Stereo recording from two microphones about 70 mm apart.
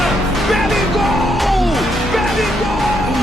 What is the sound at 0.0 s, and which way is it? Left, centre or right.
Music, centre.